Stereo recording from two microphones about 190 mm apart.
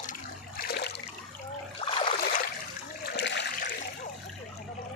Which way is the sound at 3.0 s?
60° left (ahead or behind).